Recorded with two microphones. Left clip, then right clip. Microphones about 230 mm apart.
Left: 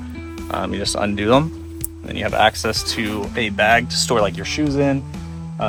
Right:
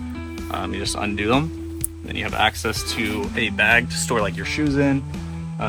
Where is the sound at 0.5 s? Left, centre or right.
Left.